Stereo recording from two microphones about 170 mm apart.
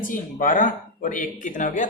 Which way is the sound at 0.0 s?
50° left (ahead or behind).